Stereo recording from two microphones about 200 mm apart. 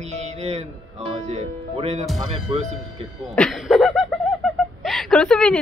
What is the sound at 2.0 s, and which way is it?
Speech, centre (ahead or behind).